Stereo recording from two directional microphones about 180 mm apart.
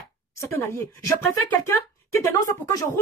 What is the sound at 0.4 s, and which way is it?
Speech, 15° left (ahead or behind).